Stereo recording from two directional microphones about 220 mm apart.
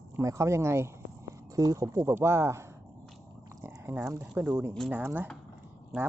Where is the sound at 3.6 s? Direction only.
10° right (ahead or behind).